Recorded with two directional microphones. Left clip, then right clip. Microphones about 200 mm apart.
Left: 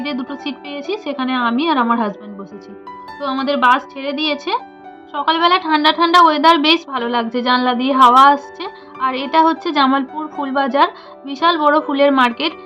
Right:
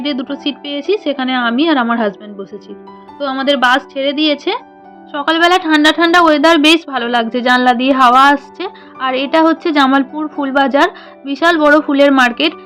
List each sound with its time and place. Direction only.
0.0 s a woman's voice: 25° right (ahead or behind)